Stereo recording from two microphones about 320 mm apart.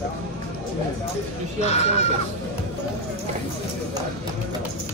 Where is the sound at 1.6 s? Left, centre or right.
Centre.